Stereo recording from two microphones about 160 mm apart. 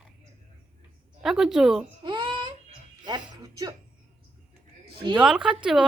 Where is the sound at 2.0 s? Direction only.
30° right (ahead or behind).